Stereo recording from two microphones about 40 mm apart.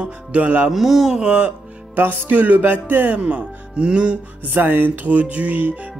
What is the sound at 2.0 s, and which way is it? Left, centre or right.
Music, right.